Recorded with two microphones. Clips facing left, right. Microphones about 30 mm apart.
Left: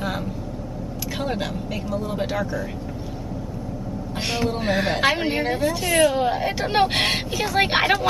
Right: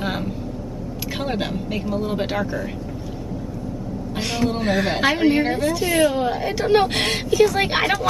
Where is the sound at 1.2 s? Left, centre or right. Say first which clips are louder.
Right 2 dB; centre.